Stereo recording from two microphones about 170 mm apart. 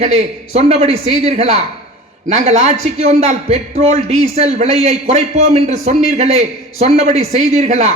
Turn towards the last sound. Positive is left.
turn(degrees=-45)  # may be behind; listen again after turning